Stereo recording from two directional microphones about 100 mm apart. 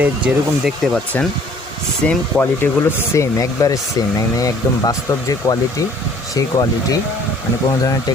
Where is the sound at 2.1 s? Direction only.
20° left (ahead or behind); by 6.9 s 35° left (ahead or behind).